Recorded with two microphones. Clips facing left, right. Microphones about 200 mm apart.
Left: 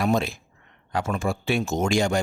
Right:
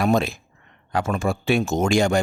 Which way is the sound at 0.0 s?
60° right (ahead or behind).